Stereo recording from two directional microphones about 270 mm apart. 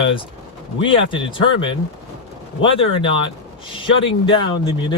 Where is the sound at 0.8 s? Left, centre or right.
Centre.